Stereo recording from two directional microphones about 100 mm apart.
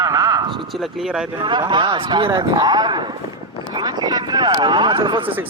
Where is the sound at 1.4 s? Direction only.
50° right (ahead or behind).